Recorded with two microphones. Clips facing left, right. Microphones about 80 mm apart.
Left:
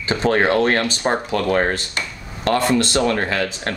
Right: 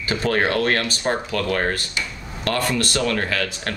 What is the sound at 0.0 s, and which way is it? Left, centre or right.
Speech, left.